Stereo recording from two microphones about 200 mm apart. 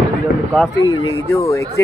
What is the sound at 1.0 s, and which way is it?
Speech, 15° left (ahead or behind).